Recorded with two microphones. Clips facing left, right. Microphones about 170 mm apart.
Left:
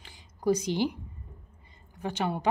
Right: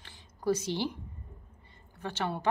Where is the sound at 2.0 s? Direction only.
15° left (ahead or behind).